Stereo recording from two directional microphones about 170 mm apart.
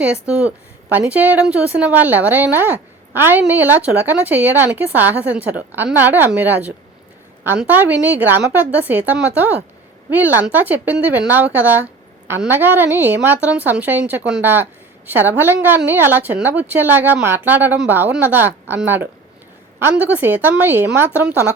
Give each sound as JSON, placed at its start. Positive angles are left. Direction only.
{"t": 0.0, "sound": "a woman's voice", "side_deg": -5}